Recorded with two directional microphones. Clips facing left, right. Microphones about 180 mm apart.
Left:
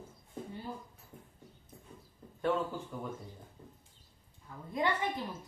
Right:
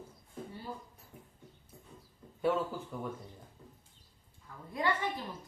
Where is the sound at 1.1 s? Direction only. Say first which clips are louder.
Left 1 dB; 10° right (ahead or behind).